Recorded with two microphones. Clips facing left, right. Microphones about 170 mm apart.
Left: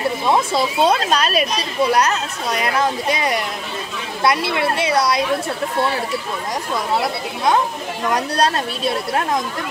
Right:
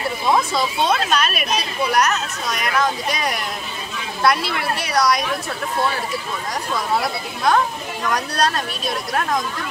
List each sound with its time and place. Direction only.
0.3 s speech: 30° left (ahead or behind)
6.7 s speech: 20° left (ahead or behind)